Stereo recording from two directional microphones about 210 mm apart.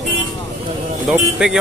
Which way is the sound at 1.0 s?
5° right (ahead or behind).